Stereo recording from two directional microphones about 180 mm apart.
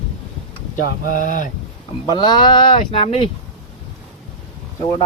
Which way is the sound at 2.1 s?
25° left (ahead or behind).